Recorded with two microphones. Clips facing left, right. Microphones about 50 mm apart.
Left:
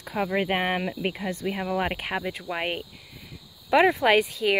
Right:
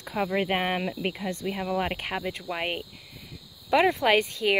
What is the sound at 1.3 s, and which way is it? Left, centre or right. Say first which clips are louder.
Speech: left 1 dB; centre.